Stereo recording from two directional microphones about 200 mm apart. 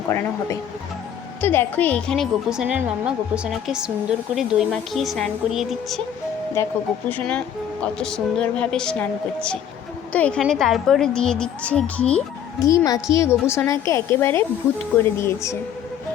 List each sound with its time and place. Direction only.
0.1 s a woman's voice: 15° left (ahead or behind)
6.6 s a woman's voice: 15° left (ahead or behind)
12.6 s a woman's voice: 15° left (ahead or behind)